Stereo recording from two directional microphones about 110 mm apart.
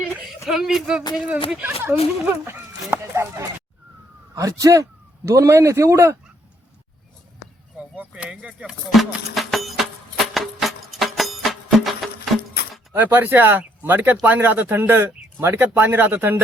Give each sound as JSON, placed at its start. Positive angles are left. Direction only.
{"t": 0.4, "sound": "speech", "side_deg": 0}
{"t": 2.2, "sound": "fowl", "side_deg": -20}
{"t": 4.4, "sound": "a man's voice", "side_deg": -30}
{"t": 7.9, "sound": "speech", "side_deg": -10}
{"t": 10.3, "sound": "music", "side_deg": 0}
{"t": 12.9, "sound": "speech", "side_deg": -15}